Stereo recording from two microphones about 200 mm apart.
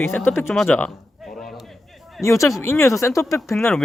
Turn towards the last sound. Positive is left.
turn(degrees=10)  # may be behind; listen again after turning